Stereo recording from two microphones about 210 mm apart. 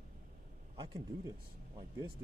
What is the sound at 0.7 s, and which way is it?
Speech, 25° right (ahead or behind).